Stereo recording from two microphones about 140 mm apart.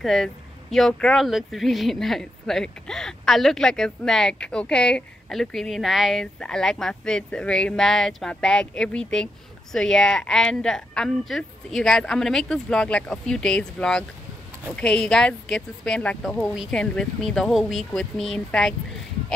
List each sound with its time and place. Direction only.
0.0 s speech: centre (ahead or behind)